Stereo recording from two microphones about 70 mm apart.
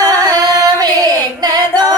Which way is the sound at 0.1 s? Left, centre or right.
Right.